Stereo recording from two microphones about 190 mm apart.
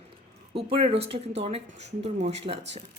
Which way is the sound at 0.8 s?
35° right (ahead or behind).